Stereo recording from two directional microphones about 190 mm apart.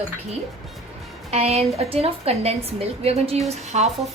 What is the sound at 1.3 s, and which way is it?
A woman's voice, 35° right (ahead or behind).